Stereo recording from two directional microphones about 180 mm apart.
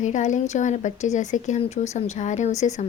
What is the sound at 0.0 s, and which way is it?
Speech, 40° left (ahead or behind).